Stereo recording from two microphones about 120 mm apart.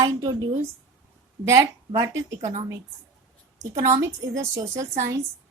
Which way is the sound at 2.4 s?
65° right (ahead or behind).